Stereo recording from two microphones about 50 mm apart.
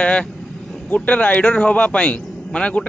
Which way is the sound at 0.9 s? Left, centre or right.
Left.